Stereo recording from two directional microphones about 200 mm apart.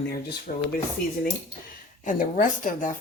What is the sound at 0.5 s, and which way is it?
Speech, 40° left (ahead or behind).